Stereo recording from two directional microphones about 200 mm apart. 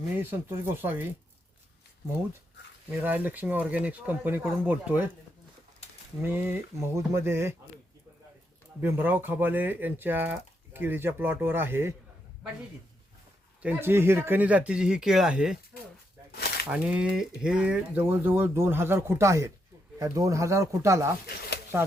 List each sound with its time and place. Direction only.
0.1 s speech: 10° right (ahead or behind)
2.9 s speech: 10° right (ahead or behind)
6.2 s speech: 10° right (ahead or behind)
8.8 s speech: 10° right (ahead or behind)
13.6 s speech: 10° right (ahead or behind)
16.3 s a sound: 50° left (ahead or behind)
16.6 s speech: 5° right (ahead or behind)